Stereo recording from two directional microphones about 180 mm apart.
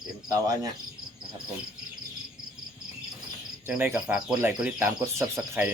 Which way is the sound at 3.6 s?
10° right (ahead or behind).